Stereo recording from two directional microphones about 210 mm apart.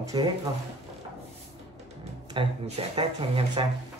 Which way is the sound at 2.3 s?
25° right (ahead or behind).